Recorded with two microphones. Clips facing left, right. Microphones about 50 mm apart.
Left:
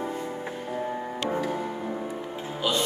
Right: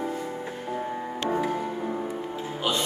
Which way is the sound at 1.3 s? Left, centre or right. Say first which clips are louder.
Right 3 dB; centre.